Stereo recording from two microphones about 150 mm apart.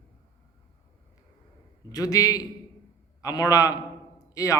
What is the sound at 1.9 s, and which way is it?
A man's voice, 25° left (ahead or behind).